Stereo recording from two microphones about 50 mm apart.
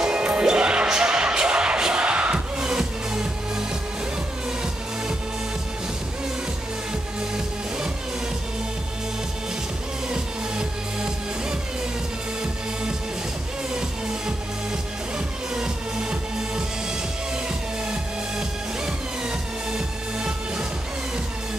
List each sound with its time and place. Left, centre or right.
0.0 s music: centre
10.0 s music: centre
13.7 s music: centre